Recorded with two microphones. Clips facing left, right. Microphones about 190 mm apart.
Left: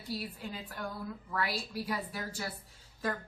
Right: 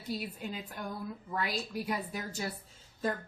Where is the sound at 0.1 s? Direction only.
20° right (ahead or behind).